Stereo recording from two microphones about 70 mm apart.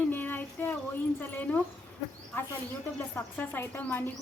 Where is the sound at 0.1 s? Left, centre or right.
Left.